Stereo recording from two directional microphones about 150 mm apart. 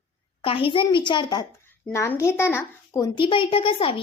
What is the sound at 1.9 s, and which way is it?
Speech, 20° left (ahead or behind).